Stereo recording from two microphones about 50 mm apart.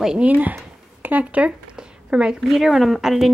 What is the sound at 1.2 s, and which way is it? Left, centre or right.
Speech, right.